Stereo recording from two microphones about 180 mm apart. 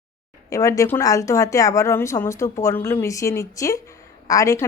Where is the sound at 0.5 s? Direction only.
15° left (ahead or behind).